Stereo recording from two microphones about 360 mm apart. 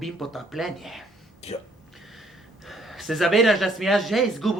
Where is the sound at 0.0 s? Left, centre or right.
Centre.